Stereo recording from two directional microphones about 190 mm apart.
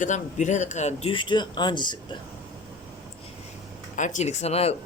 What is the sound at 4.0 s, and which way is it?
Speech, 35° left (ahead or behind).